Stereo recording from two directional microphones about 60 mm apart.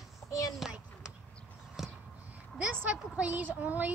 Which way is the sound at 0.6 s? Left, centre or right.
Centre.